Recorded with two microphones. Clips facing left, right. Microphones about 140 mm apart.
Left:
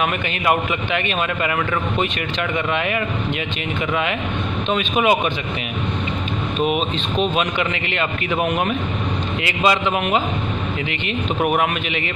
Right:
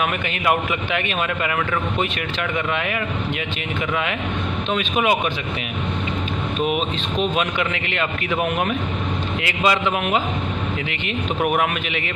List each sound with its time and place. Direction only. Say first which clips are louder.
0.0 s speech: left 1 dB; centre (ahead or behind)
2.5 s speech: left 3 dB; centre (ahead or behind)
4.6 s speech: left 2 dB; centre (ahead or behind)
6.6 s speech: left 2 dB; centre (ahead or behind)
11.4 s speech: left 1 dB; centre (ahead or behind)